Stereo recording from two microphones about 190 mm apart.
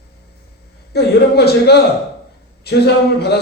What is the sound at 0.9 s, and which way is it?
Speech, 60° left (ahead or behind).